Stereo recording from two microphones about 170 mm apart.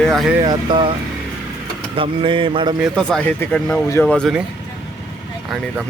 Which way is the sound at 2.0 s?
30° right (ahead or behind).